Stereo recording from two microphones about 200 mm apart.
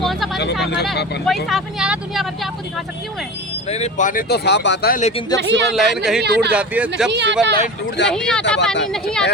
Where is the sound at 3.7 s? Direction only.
35° left (ahead or behind); by 5.0 s 50° left (ahead or behind).